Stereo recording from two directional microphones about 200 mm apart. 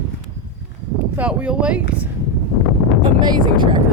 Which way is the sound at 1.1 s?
5° right (ahead or behind).